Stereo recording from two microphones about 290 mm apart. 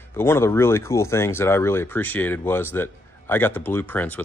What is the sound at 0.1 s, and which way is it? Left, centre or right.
Speech, centre.